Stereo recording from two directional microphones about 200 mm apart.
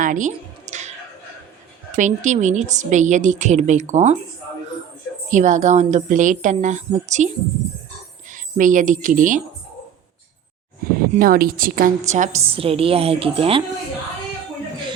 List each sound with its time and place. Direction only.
0.0 s a sound: 40° right (ahead or behind)
2.0 s a woman's voice: 35° right (ahead or behind)
5.3 s a woman's voice: 40° right (ahead or behind)
8.3 s speech: 40° right (ahead or behind)
10.8 s a sound: 45° right (ahead or behind)
11.1 s a woman's voice: 45° right (ahead or behind); by 13.6 s 30° right (ahead or behind)